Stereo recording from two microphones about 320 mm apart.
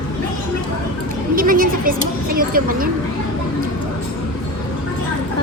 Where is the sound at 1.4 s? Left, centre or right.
Right.